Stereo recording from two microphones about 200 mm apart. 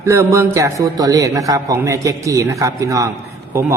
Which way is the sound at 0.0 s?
15° right (ahead or behind).